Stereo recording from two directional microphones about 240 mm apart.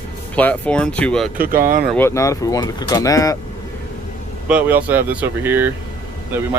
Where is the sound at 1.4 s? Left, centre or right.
Right.